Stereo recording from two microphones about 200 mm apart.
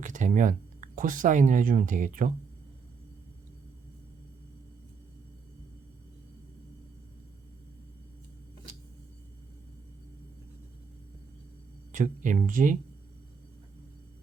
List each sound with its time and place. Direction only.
0.0 s speech: 40° right (ahead or behind)
11.9 s speech: 40° right (ahead or behind)